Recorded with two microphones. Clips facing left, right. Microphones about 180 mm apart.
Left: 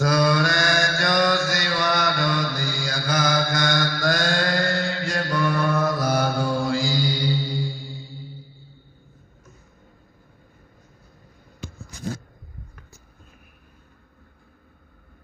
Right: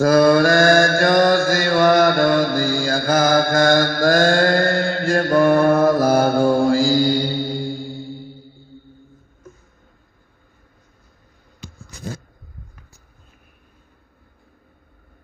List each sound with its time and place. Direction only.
0.0 s mantra: 50° right (ahead or behind)